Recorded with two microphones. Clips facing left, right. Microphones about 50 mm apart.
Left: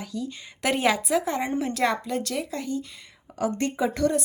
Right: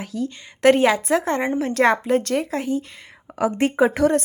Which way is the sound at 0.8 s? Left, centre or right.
Right.